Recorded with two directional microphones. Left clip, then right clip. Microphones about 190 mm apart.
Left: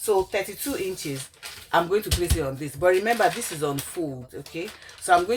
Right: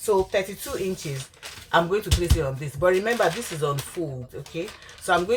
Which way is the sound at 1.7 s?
30° left (ahead or behind).